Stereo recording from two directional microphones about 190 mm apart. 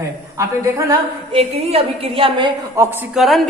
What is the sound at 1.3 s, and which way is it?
A woman's voice, 30° right (ahead or behind).